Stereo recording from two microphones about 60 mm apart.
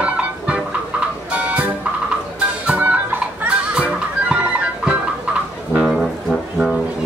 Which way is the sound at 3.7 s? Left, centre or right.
Centre.